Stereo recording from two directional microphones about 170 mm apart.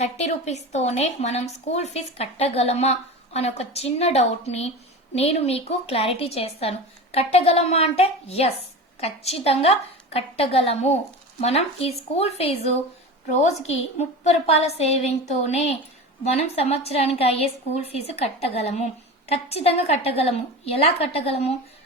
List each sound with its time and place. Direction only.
0.0 s a woman's voice: 40° left (ahead or behind)